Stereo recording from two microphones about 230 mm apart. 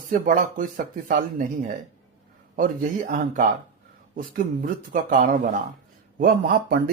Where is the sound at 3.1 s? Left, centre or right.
Right.